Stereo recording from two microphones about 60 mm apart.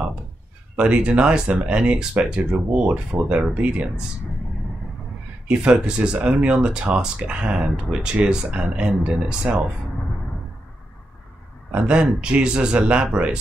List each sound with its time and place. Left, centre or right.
0.7 s speech: centre
5.5 s speech: centre
11.7 s speech: centre